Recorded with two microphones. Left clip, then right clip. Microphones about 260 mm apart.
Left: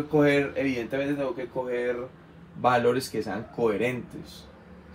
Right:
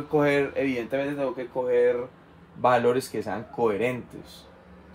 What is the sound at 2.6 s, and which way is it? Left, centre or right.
Speech, right.